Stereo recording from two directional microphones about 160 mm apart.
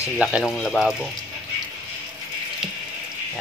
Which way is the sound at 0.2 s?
5° right (ahead or behind).